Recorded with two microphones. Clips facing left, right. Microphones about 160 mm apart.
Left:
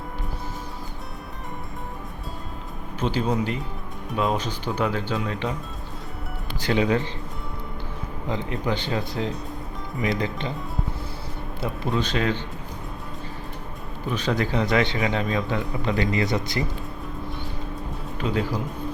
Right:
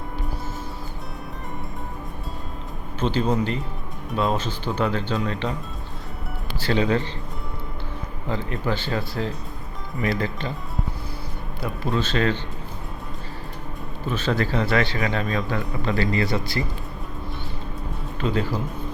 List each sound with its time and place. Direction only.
3.0 s speech: 10° left (ahead or behind)
6.6 s speech: 15° left (ahead or behind)
8.3 s a man's voice: 20° left (ahead or behind)
11.6 s speech: 20° left (ahead or behind)
14.1 s a man's voice: 15° left (ahead or behind)
18.2 s speech: 10° left (ahead or behind)